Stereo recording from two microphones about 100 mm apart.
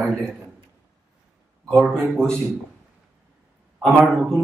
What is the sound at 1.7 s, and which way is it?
Speech, 5° left (ahead or behind).